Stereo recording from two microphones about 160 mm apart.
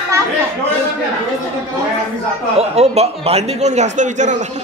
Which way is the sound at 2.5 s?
40° right (ahead or behind).